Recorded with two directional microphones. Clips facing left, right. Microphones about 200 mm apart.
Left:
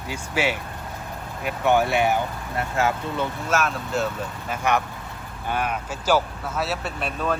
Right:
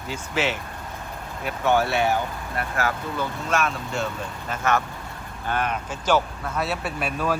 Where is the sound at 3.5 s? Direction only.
Centre (ahead or behind).